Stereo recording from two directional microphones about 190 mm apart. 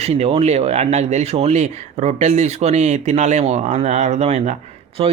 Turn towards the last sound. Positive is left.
turn(degrees=-30)  # may be behind; listen again after turning